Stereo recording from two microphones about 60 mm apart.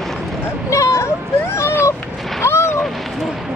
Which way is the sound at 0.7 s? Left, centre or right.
Left.